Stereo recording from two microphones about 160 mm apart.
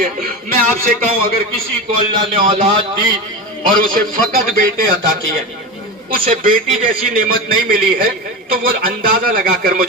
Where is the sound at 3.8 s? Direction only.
60° right (ahead or behind).